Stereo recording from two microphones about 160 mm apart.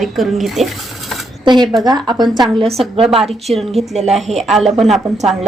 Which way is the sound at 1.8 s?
25° right (ahead or behind).